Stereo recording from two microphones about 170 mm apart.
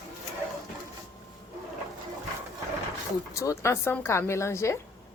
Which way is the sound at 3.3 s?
15° left (ahead or behind).